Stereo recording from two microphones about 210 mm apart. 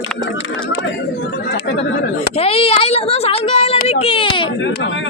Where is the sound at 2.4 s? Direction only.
30° left (ahead or behind).